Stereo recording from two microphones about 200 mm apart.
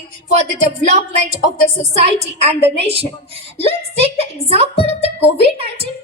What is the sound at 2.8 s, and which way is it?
Speech, 30° right (ahead or behind).